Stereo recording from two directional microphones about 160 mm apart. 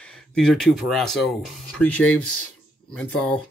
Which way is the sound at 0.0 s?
5° left (ahead or behind).